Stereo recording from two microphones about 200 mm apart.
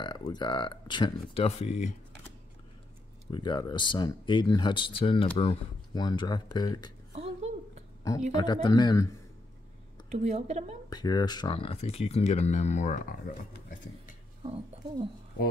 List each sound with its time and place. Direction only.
0.0 s speech: 20° left (ahead or behind)
3.3 s speech: 20° left (ahead or behind)
7.1 s a sound: 35° right (ahead or behind)
8.3 s speech: 20° left (ahead or behind)
10.0 s a woman's voice: 35° right (ahead or behind)
10.9 s speech: 20° left (ahead or behind); by 14.1 s 45° left (ahead or behind)
14.4 s speech: 25° right (ahead or behind)